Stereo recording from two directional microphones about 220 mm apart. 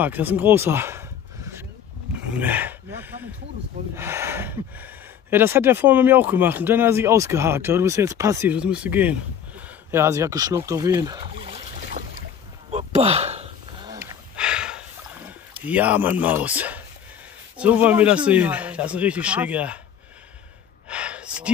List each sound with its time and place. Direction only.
0.0 s speech: 10° right (ahead or behind)
2.3 s speech: 10° right (ahead or behind)
12.7 s a sound: 30° right (ahead or behind)
13.8 s snort: 15° right (ahead or behind)
14.3 s a sound: 5° right (ahead or behind)
15.6 s a man's voice: 5° right (ahead or behind)
20.9 s gasp: 5° right (ahead or behind)